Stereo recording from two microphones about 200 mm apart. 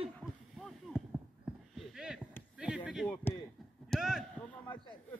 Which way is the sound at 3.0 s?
5° left (ahead or behind).